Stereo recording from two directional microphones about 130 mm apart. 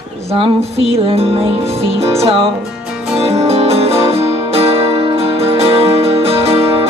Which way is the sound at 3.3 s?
50° right (ahead or behind).